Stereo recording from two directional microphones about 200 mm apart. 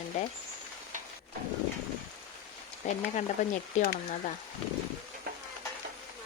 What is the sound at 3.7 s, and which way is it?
Speech, 35° left (ahead or behind).